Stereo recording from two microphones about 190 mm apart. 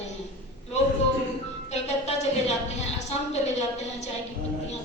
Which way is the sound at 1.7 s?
35° left (ahead or behind).